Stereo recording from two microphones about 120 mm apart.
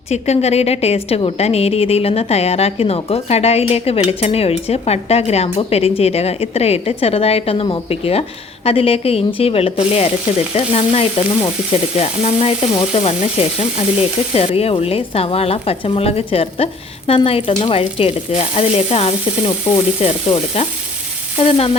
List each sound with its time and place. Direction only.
0.1 s a woman's voice: 65° left (ahead or behind)
8.6 s sizzle: 55° left (ahead or behind)
10.5 s a woman's voice: 55° left (ahead or behind)
17.1 s sizzle: 55° left (ahead or behind)
21.3 s a woman's voice: 55° left (ahead or behind)